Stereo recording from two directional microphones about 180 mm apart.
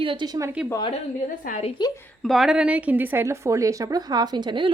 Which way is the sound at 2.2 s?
Centre (ahead or behind).